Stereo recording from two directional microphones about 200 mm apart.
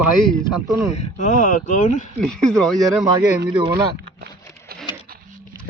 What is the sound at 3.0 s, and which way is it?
Speech, 20° right (ahead or behind).